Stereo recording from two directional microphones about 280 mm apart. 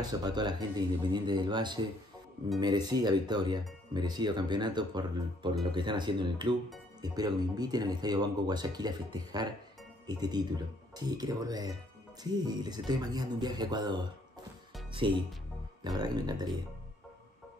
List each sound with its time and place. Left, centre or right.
0.0 s speech: centre